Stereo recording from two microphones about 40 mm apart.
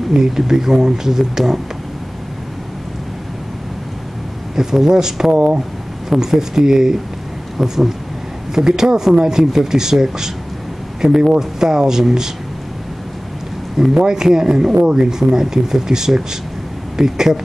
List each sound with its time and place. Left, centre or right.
0.4 s speech: centre
4.6 s speech: centre
13.9 s speech: centre